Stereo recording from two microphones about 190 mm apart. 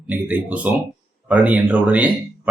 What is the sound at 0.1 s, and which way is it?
A man's voice, 10° right (ahead or behind).